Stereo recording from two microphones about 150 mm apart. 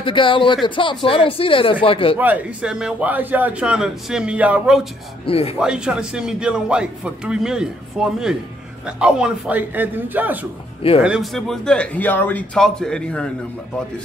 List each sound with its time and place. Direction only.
0.0 s speech: 35° left (ahead or behind)
2.1 s a man's voice: 10° right (ahead or behind)
5.2 s speech: 40° left (ahead or behind)
5.6 s a man's voice: 5° right (ahead or behind)